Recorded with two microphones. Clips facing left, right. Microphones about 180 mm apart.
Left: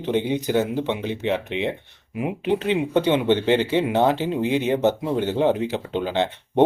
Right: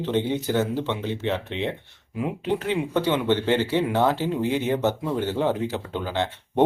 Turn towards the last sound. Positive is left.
turn(degrees=20)  # may be behind; listen again after turning